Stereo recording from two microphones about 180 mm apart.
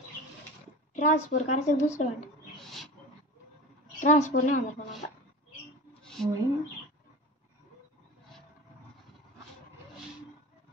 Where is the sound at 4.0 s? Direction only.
40° left (ahead or behind).